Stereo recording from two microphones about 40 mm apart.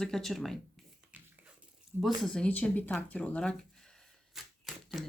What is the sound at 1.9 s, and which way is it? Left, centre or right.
Speech, right.